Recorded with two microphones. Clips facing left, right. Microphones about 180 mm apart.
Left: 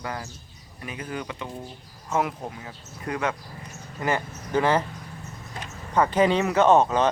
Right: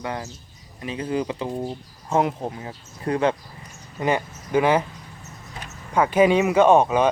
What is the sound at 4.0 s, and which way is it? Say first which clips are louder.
Speech: right 4 dB; 15° right (ahead or behind).